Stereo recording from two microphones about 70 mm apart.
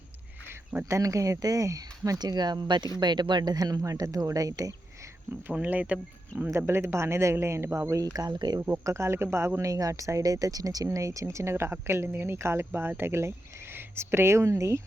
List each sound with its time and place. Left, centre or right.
0.9 s speech: right
5.3 s speech: right
6.4 s speech: right
8.1 s speech: right
8.8 s speech: right